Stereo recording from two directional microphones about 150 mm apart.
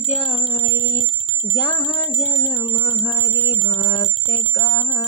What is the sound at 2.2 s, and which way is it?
Music, 25° left (ahead or behind).